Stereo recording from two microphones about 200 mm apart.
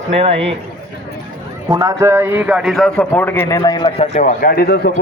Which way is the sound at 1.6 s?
15° right (ahead or behind).